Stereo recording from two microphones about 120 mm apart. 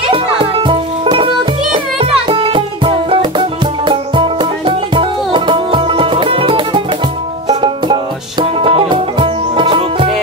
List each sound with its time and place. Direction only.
0.1 s music: 45° right (ahead or behind)